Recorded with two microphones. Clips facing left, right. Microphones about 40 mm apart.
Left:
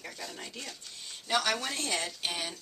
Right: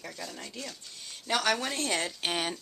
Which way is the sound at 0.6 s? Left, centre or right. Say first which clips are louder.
Right 1 dB; centre.